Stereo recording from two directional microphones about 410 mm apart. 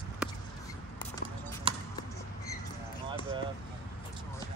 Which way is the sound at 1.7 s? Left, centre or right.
Centre.